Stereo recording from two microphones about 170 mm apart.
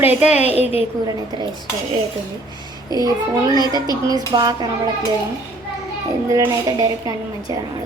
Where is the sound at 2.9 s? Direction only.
20° right (ahead or behind).